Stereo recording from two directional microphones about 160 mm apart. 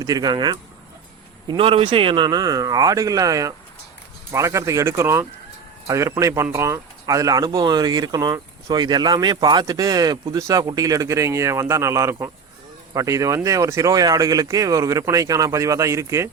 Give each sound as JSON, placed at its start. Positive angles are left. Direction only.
{"t": 0.0, "sound": "speech", "side_deg": -25}